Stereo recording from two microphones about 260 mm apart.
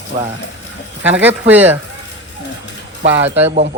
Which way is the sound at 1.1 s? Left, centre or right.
Centre.